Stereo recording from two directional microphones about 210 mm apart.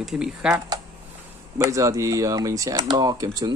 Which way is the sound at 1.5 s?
15° right (ahead or behind).